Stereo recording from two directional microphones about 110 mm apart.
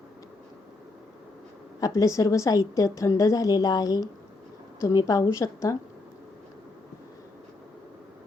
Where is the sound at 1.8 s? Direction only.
30° left (ahead or behind).